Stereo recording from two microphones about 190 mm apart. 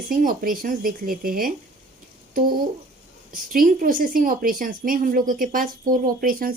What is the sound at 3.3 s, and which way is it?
A woman's voice, 45° right (ahead or behind).